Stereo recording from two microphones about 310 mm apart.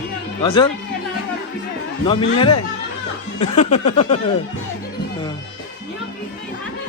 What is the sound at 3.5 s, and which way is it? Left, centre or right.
Snicker, left.